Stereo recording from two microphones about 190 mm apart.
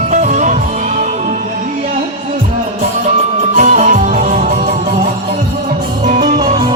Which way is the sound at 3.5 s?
40° right (ahead or behind).